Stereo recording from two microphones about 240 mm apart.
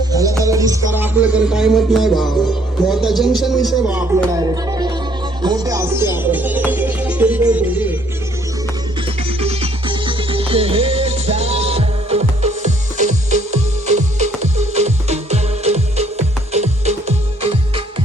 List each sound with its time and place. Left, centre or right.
0.1 s music: centre
9.4 s music: right